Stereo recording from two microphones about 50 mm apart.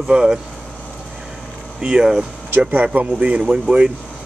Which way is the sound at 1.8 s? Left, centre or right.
Right.